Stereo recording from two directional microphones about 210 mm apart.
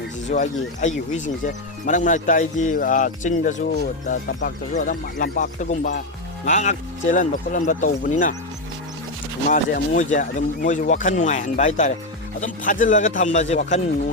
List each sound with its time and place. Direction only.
0.3 s speech: 35° left (ahead or behind)
9.5 s speech: 35° left (ahead or behind)